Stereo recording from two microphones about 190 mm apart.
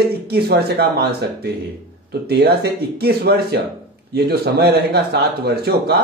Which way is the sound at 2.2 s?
60° right (ahead or behind).